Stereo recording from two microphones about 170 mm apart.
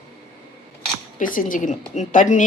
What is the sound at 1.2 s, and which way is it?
A woman's voice, 55° left (ahead or behind).